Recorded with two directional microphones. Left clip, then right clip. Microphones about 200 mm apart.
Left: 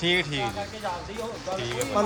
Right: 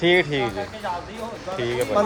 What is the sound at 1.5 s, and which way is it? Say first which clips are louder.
Speech: right 7 dB; 15° left (ahead or behind).